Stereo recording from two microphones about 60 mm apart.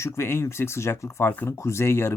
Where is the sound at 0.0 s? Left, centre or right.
Left.